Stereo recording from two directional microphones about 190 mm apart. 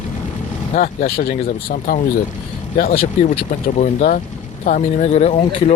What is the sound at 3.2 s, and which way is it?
Speech, 40° left (ahead or behind).